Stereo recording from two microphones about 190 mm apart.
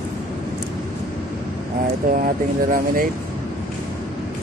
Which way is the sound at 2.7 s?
45° right (ahead or behind).